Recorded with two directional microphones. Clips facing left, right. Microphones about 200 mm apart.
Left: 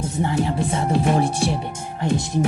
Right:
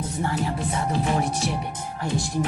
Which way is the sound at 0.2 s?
25° left (ahead or behind).